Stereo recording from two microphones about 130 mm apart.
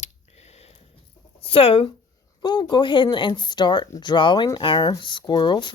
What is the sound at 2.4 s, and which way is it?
Speech, 35° left (ahead or behind).